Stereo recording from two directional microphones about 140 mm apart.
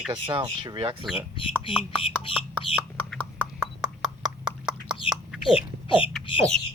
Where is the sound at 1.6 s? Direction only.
40° left (ahead or behind).